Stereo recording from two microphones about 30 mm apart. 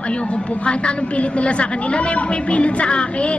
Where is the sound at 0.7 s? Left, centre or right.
Left.